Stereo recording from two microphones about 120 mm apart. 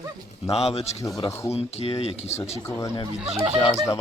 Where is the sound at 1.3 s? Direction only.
25° left (ahead or behind).